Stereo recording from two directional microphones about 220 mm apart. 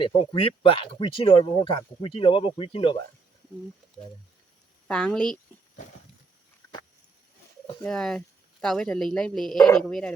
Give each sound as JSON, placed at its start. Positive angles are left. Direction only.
{"t": 0.0, "sound": "speech", "side_deg": 25}
{"t": 4.9, "sound": "speech", "side_deg": 5}
{"t": 7.8, "sound": "speech", "side_deg": 5}